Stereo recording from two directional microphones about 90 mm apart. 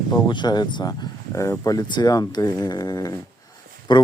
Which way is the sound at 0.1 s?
55° left (ahead or behind).